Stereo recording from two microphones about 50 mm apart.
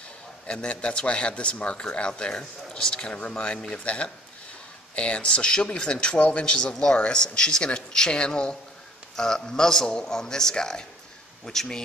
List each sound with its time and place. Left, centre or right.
0.5 s speech: left
6.1 s a man's voice: left; by 11.8 s centre